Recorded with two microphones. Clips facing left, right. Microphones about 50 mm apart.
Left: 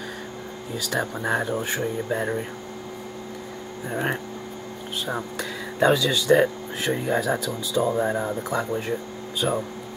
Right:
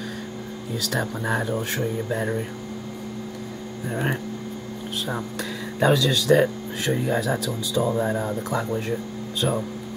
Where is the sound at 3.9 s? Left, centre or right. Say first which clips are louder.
Even; centre.